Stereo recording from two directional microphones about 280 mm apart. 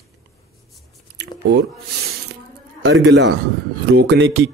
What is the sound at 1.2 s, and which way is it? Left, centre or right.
Chewing, right.